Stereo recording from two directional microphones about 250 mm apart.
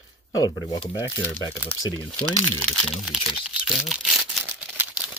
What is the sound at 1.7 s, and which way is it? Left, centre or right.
Speech, left.